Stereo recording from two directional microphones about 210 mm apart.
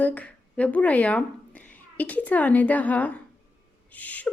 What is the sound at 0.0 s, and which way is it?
A woman's voice, 5° left (ahead or behind).